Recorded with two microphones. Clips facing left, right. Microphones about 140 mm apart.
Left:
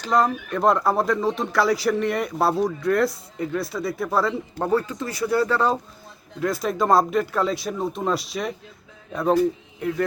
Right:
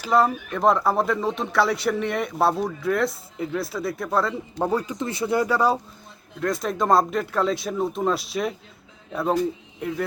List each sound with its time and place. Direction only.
0.0 s speech: 5° right (ahead or behind)
4.6 s speech: 15° right (ahead or behind)
6.4 s speech: centre (ahead or behind)